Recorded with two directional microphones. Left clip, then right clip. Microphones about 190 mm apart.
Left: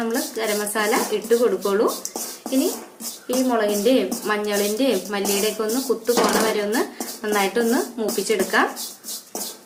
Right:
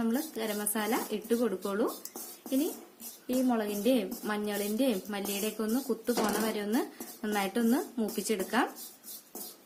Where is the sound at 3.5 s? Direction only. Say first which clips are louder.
Left 14 dB; 50° right (ahead or behind).